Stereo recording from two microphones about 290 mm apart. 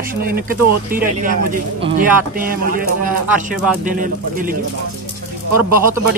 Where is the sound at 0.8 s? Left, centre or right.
Right.